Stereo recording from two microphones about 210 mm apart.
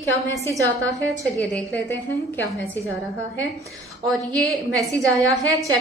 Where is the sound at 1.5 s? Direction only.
10° left (ahead or behind).